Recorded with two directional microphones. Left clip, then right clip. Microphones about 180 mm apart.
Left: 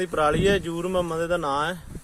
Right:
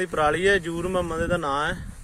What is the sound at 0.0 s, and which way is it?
Speech, 20° right (ahead or behind).